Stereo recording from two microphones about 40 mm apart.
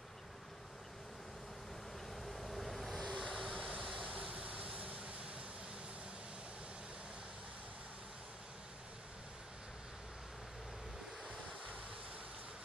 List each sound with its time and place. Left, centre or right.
2.2 s waves: centre
3.9 s vehicle: right